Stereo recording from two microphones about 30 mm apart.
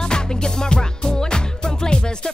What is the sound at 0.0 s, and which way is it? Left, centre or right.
Music, left.